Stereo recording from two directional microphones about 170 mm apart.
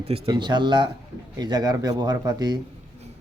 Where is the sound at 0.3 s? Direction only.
25° right (ahead or behind).